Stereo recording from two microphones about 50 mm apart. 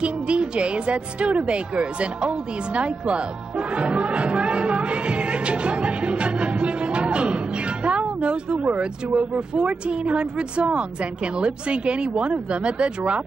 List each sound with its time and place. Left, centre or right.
0.0 s speech: right
3.7 s music: right
7.8 s speech: right